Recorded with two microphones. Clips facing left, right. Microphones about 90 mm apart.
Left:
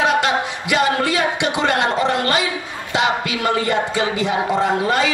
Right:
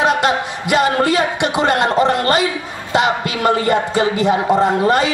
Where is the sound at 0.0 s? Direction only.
40° right (ahead or behind).